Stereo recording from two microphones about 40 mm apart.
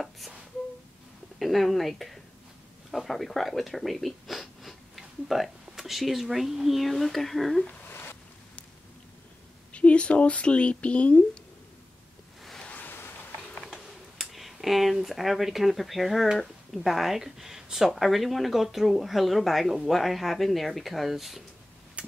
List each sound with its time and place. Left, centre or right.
1.4 s speech: centre
9.7 s speech: left
12.6 s waves: left
13.6 s a sound: left
14.2 s speech: centre